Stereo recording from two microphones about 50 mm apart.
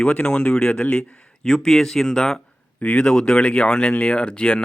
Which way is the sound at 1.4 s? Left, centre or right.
Centre.